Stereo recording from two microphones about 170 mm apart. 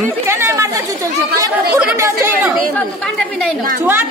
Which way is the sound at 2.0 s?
15° right (ahead or behind).